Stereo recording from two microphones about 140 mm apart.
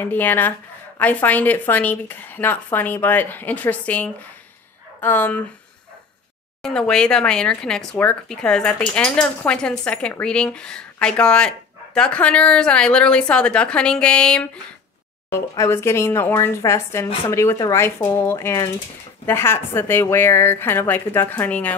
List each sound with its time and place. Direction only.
0.0 s speech: 15° left (ahead or behind)
6.6 s speech: 5° left (ahead or behind)
15.2 s speech: 20° left (ahead or behind)